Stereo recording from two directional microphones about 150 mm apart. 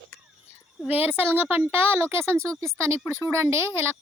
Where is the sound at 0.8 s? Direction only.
10° right (ahead or behind).